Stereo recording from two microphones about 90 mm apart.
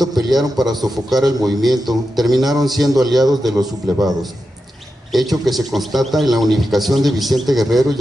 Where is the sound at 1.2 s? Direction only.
45° right (ahead or behind).